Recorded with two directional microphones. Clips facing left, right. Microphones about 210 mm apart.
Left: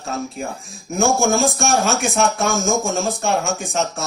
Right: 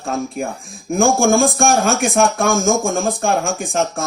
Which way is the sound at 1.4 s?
50° right (ahead or behind).